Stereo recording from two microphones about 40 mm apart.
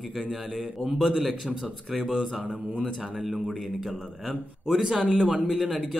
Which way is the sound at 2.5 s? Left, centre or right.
Right.